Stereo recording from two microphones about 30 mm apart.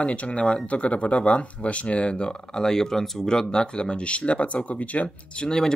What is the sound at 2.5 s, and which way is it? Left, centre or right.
Speech, centre.